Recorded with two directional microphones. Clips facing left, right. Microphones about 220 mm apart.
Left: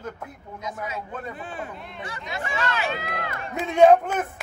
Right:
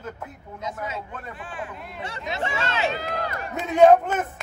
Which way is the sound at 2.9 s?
40° right (ahead or behind).